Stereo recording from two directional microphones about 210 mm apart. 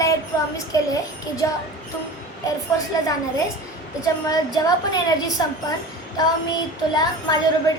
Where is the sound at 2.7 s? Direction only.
15° left (ahead or behind).